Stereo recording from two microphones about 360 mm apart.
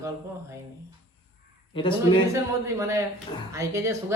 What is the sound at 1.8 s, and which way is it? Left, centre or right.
Speech, centre.